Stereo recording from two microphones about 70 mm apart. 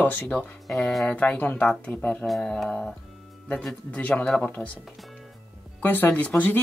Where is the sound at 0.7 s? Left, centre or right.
Centre.